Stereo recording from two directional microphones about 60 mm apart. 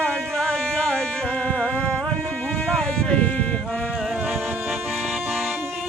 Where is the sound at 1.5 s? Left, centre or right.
Left.